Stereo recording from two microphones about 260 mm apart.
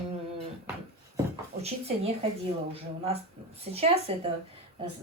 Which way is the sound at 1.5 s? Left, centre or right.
Right.